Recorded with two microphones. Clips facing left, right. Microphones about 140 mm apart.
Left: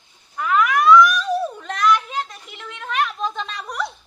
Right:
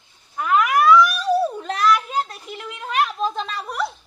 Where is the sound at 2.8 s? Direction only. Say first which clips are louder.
Right 2 dB; 35° right (ahead or behind).